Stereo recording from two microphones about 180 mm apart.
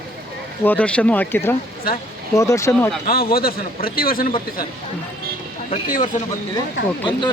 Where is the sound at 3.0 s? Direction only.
55° left (ahead or behind).